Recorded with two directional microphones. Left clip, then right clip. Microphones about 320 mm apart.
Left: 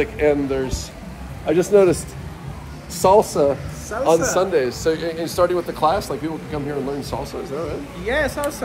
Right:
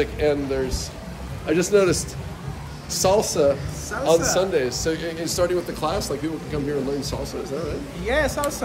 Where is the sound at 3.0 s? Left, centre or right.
Centre.